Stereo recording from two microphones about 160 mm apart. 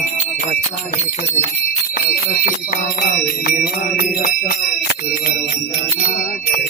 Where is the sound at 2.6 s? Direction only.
65° left (ahead or behind).